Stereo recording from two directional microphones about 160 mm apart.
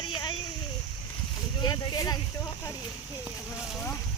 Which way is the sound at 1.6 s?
25° left (ahead or behind).